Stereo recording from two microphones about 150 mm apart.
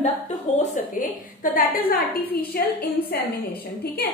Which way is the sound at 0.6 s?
65° left (ahead or behind).